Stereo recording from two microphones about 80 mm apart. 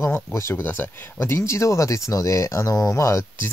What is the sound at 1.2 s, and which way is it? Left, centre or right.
Speech, left.